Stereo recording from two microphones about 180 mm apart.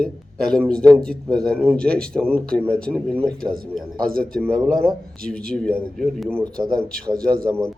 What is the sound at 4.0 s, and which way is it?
Speech, 55° right (ahead or behind).